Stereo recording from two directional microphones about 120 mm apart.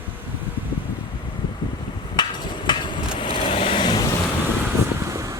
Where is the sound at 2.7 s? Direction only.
40° left (ahead or behind).